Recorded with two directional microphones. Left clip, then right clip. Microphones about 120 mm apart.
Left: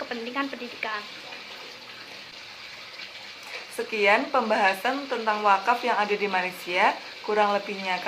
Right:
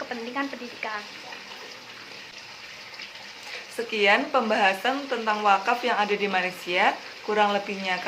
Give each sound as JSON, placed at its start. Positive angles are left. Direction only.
{"t": 0.1, "sound": "frying", "side_deg": 25}
{"t": 3.8, "sound": "speech", "side_deg": -30}